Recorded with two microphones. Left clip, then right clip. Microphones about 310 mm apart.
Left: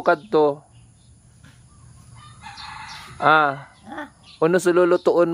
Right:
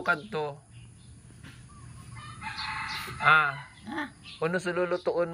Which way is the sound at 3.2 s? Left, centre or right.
Centre.